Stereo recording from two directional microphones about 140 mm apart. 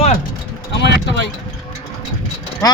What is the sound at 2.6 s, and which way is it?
Speech, 25° left (ahead or behind).